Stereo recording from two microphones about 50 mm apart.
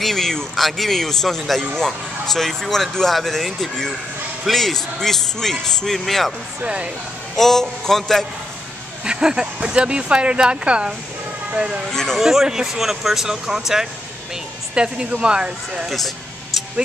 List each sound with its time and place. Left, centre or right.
0.0 s speech: centre
6.6 s speech: right
7.3 s a man's voice: centre
9.0 s speech: centre
11.9 s a man's voice: centre
12.2 s speech: centre
14.8 s speech: right